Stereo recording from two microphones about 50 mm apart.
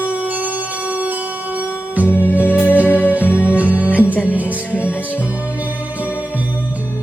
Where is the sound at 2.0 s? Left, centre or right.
Left.